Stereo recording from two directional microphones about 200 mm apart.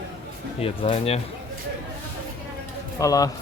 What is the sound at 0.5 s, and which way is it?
Speech, 30° left (ahead or behind).